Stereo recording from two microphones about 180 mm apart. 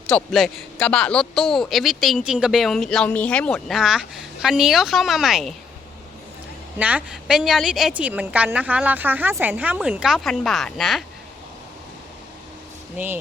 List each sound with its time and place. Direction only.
0.1 s speech: centre (ahead or behind)
6.7 s a woman's voice: 10° right (ahead or behind)